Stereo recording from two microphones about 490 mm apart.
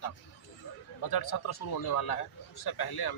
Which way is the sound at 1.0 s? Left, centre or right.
Left.